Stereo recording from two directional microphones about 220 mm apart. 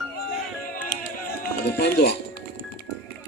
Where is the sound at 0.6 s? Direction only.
40° left (ahead or behind).